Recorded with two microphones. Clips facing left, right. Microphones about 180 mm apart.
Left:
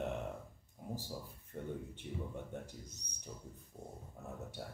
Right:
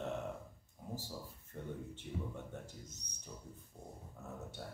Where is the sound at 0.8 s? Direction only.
15° left (ahead or behind).